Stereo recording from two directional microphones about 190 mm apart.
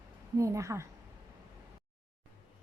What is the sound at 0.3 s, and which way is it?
Speech, 15° right (ahead or behind).